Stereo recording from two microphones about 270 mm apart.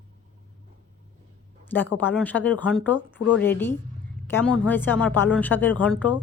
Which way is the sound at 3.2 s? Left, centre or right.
Left.